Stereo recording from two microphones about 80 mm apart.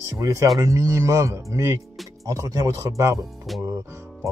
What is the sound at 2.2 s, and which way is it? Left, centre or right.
Speech, right.